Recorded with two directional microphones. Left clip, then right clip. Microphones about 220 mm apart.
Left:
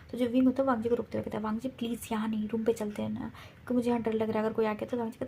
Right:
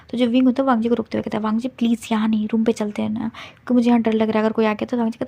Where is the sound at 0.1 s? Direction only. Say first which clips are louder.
Right 10 dB; 35° right (ahead or behind).